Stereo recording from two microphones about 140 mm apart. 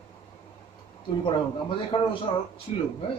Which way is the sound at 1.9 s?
35° left (ahead or behind).